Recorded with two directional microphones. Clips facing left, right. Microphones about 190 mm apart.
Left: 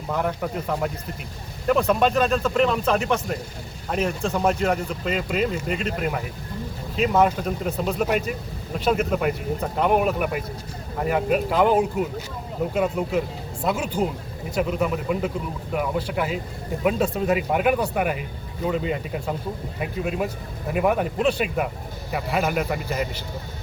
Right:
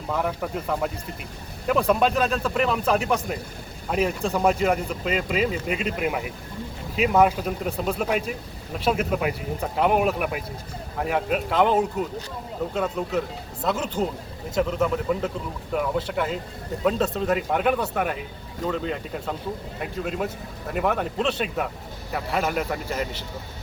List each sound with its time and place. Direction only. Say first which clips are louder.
0.1 s speech: left 1 dB; centre (ahead or behind)
14.5 s speech: even; 10° left (ahead or behind)